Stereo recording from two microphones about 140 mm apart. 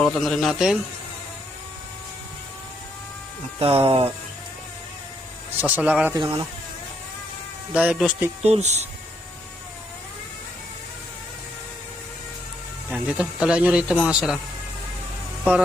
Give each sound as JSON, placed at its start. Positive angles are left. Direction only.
{"t": 0.0, "sound": "a man's voice", "side_deg": 0}
{"t": 3.6, "sound": "speech", "side_deg": -40}
{"t": 5.5, "sound": "speech", "side_deg": -10}
{"t": 6.1, "sound": "speech", "side_deg": -30}
{"t": 7.7, "sound": "speech", "side_deg": -10}
{"t": 8.4, "sound": "speech", "side_deg": -50}
{"t": 12.9, "sound": "speech", "side_deg": -5}